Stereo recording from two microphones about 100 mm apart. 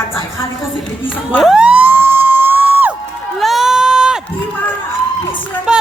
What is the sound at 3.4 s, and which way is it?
Run, centre (ahead or behind).